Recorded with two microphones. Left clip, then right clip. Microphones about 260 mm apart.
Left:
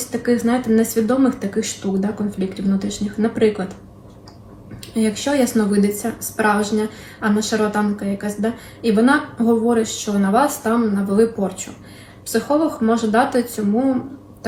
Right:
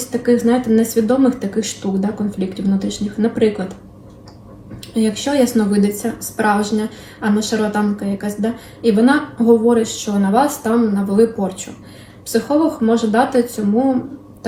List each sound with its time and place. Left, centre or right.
0.1 s a woman's voice: centre
4.9 s a woman's voice: centre